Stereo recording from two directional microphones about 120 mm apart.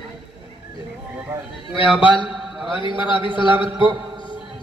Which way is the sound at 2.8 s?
40° left (ahead or behind).